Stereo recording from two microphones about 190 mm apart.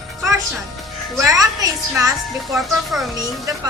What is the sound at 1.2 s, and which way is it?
Speech, 20° right (ahead or behind).